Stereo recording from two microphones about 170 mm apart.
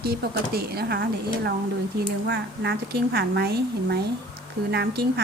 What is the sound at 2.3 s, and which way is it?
A woman's voice, 90° right.